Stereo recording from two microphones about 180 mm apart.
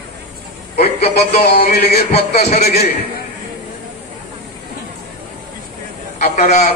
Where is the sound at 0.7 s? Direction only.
35° left (ahead or behind).